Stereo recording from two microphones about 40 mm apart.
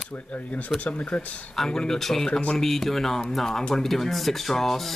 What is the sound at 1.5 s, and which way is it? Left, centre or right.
Speech, centre.